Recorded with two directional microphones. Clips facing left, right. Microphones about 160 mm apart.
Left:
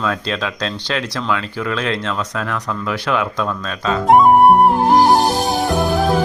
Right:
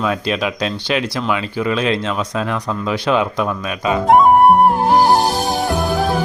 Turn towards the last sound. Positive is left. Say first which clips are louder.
# left 1 dB
turn(degrees=0)  # may be behind; listen again after turning